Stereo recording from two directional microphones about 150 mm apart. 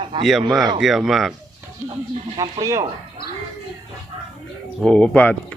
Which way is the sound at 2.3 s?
25° right (ahead or behind).